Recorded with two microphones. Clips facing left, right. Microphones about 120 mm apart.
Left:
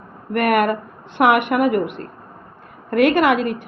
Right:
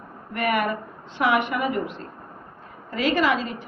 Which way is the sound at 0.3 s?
60° left (ahead or behind).